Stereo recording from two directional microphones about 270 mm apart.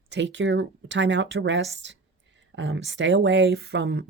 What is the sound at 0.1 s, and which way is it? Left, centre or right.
Speech, right.